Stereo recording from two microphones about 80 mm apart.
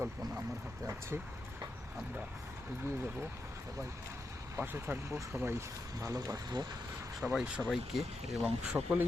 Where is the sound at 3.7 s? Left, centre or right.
Right.